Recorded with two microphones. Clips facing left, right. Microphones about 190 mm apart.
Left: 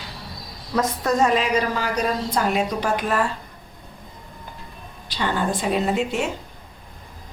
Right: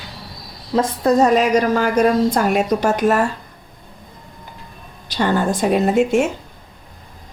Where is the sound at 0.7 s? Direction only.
30° right (ahead or behind).